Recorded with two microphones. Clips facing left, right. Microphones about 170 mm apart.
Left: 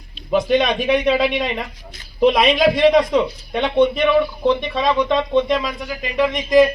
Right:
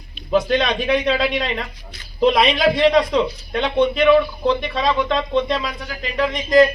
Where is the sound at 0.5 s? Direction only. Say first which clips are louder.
Left 2 dB; 15° left (ahead or behind).